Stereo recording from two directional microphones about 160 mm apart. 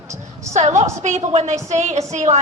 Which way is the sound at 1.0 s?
40° right (ahead or behind).